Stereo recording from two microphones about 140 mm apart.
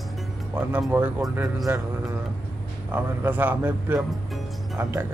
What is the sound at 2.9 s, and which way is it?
A man's voice, 15° right (ahead or behind).